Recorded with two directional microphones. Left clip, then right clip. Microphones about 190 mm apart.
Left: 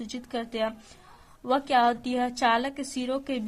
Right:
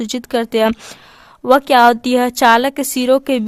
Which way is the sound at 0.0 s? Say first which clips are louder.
Right 15 dB; 45° right (ahead or behind).